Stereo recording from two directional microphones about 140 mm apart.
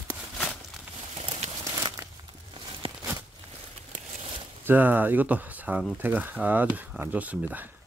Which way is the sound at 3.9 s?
50° right (ahead or behind).